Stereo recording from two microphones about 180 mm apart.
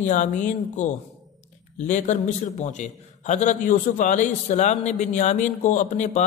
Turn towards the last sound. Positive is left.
turn(degrees=40)  # may be behind; listen again after turning